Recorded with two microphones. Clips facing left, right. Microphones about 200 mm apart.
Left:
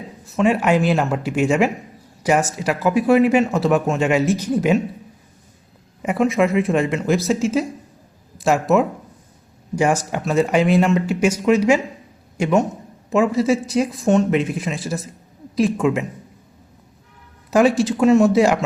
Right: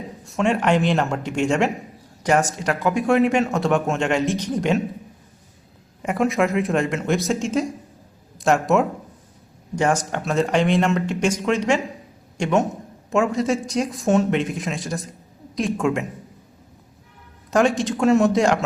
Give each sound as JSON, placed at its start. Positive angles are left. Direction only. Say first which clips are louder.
{"t": 0.3, "sound": "speech", "louder": "left 3 dB", "side_deg": 5}
{"t": 6.0, "sound": "speech", "louder": "left 3 dB", "side_deg": 0}
{"t": 17.5, "sound": "speech", "louder": "left 3 dB", "side_deg": 5}